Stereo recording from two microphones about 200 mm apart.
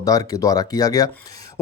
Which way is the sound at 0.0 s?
20° left (ahead or behind).